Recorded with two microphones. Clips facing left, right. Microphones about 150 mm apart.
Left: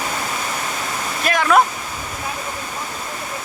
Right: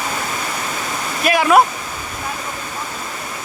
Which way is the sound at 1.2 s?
10° right (ahead or behind).